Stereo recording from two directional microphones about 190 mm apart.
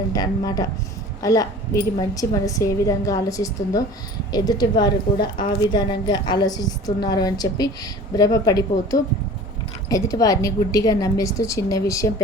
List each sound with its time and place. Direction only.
0.1 s a woman's voice: 20° left (ahead or behind)